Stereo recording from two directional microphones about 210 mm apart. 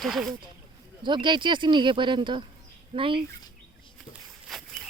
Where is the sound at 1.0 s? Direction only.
20° right (ahead or behind).